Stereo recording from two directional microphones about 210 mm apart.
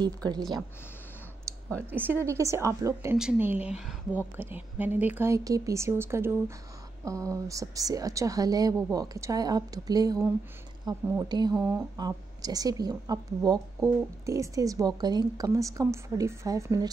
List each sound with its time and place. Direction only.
0.0 s speech: 20° right (ahead or behind)
1.9 s a woman's voice: 10° right (ahead or behind)